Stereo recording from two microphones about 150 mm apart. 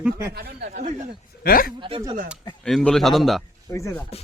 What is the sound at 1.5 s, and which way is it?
Speech, 75° left (ahead or behind).